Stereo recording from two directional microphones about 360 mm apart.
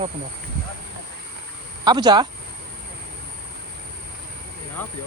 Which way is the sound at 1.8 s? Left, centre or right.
Centre.